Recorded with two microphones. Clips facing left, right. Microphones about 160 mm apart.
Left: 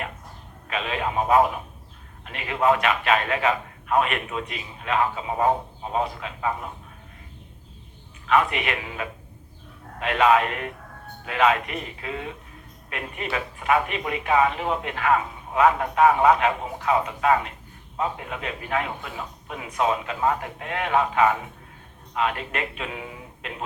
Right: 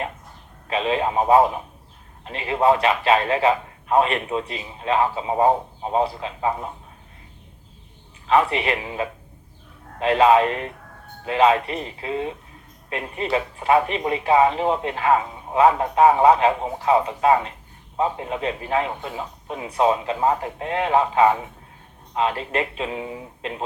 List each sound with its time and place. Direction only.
0.7 s a man's voice: 30° right (ahead or behind)
8.3 s a man's voice: 30° right (ahead or behind)